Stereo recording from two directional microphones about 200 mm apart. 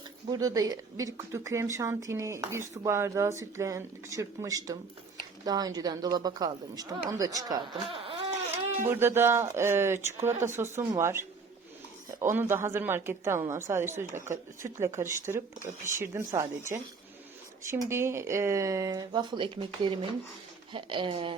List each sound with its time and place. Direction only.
0.3 s speech: 15° right (ahead or behind)
8.9 s speech: 10° right (ahead or behind); by 21.3 s 25° right (ahead or behind)